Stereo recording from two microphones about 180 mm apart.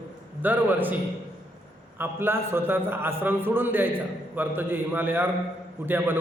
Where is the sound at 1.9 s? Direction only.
10° right (ahead or behind).